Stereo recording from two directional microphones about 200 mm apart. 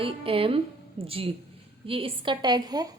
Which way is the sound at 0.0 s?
30° right (ahead or behind).